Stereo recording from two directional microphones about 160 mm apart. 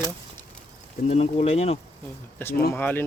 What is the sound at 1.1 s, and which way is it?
Speech, 40° left (ahead or behind).